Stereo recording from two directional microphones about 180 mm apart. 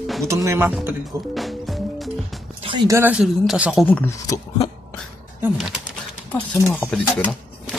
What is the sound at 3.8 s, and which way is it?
Speech, 10° left (ahead or behind).